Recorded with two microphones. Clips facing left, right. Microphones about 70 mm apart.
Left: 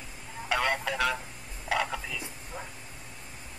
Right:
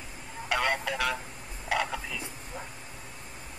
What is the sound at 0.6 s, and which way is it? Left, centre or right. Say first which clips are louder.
Telephone: even; centre.